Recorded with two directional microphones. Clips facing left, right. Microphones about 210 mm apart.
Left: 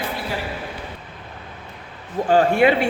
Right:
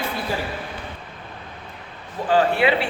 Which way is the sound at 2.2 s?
45° left (ahead or behind).